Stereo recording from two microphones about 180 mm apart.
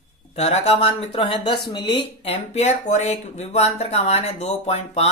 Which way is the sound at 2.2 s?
35° left (ahead or behind).